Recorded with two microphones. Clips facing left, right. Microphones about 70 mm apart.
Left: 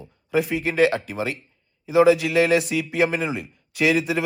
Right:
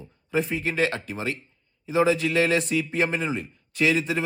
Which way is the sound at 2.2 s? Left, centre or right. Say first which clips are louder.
Left 3 dB; centre.